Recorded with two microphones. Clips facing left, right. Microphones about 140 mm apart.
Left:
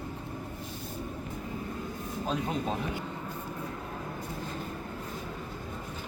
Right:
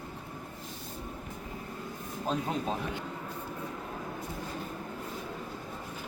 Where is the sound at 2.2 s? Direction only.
Centre (ahead or behind).